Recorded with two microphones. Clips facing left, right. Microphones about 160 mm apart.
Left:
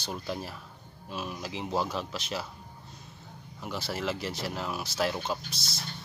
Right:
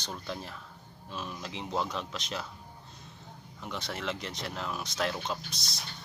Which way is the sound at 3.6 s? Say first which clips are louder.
Left 3 dB; 5° left (ahead or behind).